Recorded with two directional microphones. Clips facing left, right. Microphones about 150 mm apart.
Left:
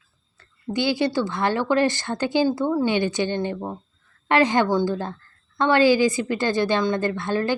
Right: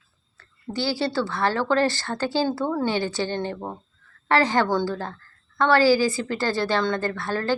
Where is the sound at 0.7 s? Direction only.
20° left (ahead or behind).